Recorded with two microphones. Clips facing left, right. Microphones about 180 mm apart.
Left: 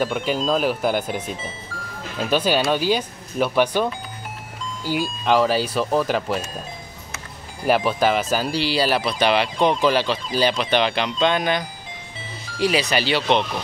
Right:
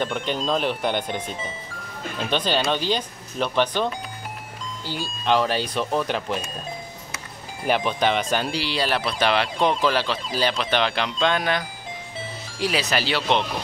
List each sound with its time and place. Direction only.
0.0 s speech: 5° left (ahead or behind)
7.6 s speech: 5° left (ahead or behind)